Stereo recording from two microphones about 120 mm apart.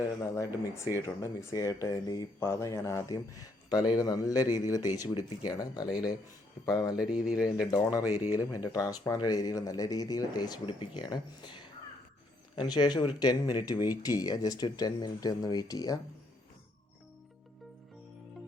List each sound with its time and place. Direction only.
0.2 s speech: 25° left (ahead or behind)
6.9 s speech: 5° right (ahead or behind)
7.4 s speech: 30° left (ahead or behind)